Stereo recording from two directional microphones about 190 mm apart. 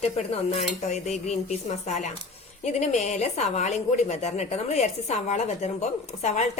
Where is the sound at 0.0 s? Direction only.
35° left (ahead or behind).